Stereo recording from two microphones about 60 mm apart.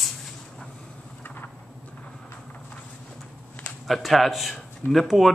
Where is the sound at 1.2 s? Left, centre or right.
Left.